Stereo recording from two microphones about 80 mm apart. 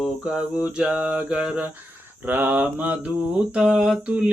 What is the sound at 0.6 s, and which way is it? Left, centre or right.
Mantra, centre.